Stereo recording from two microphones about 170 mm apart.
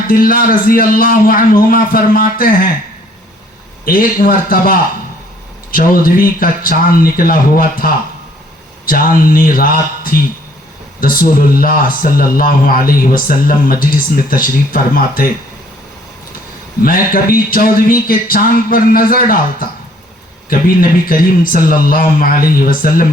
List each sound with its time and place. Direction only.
0.1 s a man's voice: 55° left (ahead or behind)
3.8 s a man's voice: 55° left (ahead or behind)
16.8 s a man's voice: 55° left (ahead or behind)